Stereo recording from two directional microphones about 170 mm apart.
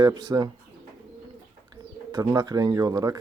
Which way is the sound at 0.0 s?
20° right (ahead or behind).